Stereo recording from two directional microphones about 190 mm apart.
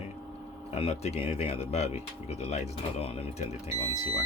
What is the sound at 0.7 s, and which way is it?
Speech, 35° left (ahead or behind).